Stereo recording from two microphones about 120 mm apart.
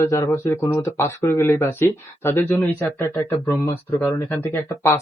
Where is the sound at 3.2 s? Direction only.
25° left (ahead or behind).